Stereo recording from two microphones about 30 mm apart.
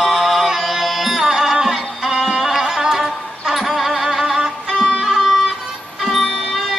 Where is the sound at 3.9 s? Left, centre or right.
Centre.